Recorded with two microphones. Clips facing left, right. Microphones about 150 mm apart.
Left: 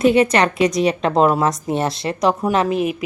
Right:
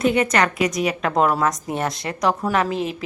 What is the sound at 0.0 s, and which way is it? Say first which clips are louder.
A woman's voice: left 4 dB; 25° left (ahead or behind).